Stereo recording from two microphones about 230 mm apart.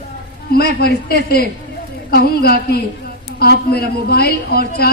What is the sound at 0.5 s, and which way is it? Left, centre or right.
A man's voice, left.